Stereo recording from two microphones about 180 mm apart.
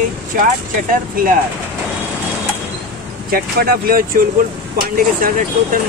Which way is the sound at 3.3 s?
55° right (ahead or behind).